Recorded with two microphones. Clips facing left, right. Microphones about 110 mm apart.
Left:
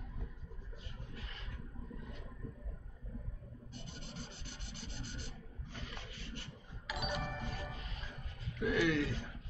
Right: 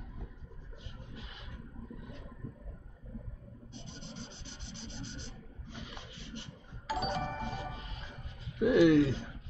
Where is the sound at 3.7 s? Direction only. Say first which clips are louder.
Right 3 dB; 5° left (ahead or behind).